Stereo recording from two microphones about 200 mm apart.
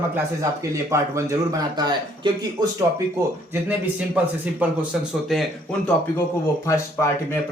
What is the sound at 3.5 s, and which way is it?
A man's voice, 10° right (ahead or behind).